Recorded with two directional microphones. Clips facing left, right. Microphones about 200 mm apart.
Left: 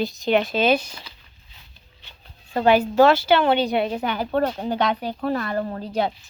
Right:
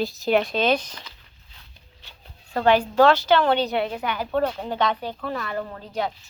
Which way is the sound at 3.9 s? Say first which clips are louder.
Left 3 dB; 25° left (ahead or behind).